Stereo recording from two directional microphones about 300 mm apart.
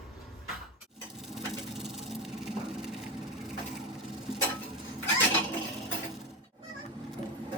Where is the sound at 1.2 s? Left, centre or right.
Centre.